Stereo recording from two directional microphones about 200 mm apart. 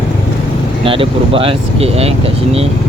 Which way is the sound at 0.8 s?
25° right (ahead or behind).